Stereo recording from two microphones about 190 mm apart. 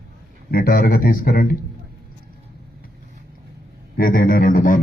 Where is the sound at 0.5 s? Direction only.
50° left (ahead or behind).